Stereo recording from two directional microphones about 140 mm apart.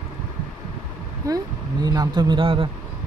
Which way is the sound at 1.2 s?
25° right (ahead or behind).